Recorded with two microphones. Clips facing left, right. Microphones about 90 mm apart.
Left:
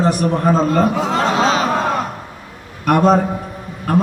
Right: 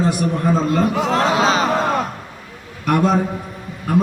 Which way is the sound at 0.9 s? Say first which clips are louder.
Even; centre (ahead or behind).